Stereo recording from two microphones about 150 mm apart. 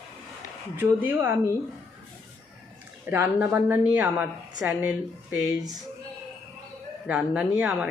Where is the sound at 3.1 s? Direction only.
15° right (ahead or behind).